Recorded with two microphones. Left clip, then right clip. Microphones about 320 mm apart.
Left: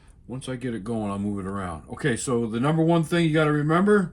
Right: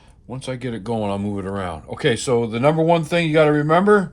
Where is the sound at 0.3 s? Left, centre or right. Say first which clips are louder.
Right 4 dB; right.